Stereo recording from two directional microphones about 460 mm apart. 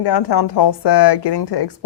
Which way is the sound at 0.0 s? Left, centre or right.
Left.